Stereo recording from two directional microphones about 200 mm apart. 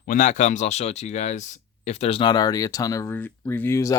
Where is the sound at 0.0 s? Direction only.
40° left (ahead or behind).